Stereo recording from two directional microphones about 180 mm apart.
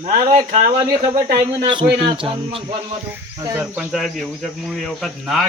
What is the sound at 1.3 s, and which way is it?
Speech, 25° right (ahead or behind).